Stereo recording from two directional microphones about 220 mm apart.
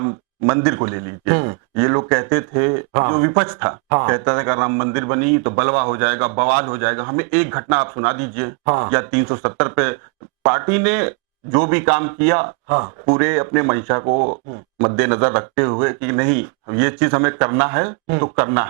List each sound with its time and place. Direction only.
0.0 s a man's voice: 25° right (ahead or behind)
14.1 s speech: 35° right (ahead or behind)
14.8 s a man's voice: 20° right (ahead or behind)